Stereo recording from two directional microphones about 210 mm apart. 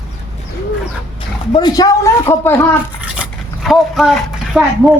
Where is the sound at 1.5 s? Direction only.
20° left (ahead or behind).